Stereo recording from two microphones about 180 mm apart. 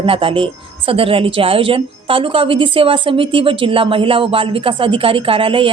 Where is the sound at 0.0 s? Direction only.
30° right (ahead or behind).